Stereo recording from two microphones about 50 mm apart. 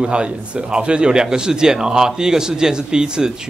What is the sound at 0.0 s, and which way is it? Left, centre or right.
Speech, right.